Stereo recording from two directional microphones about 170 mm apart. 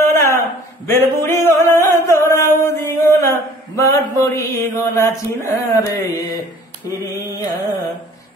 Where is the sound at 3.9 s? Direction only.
20° left (ahead or behind).